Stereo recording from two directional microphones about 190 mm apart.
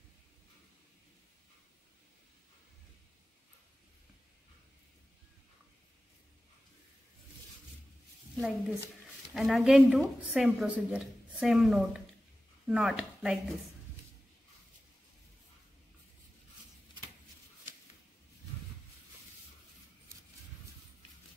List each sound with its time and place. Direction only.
8.4 s a woman's voice: 5° right (ahead or behind)